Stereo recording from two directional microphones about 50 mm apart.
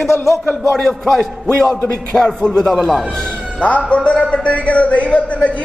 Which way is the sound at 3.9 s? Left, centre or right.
Left.